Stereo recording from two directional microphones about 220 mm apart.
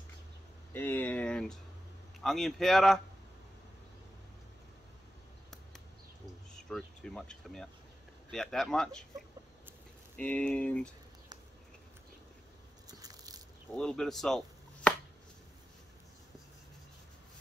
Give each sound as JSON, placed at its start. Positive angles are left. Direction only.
{"t": 0.7, "sound": "a sound", "side_deg": 10}
{"t": 2.2, "sound": "speech", "side_deg": 0}
{"t": 6.5, "sound": "speech", "side_deg": 5}
{"t": 10.1, "sound": "speech", "side_deg": 5}
{"t": 12.8, "sound": "biting", "side_deg": -15}
{"t": 13.7, "sound": "speech", "side_deg": 5}